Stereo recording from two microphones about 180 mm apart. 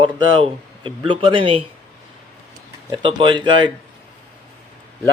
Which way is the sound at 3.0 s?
30° right (ahead or behind).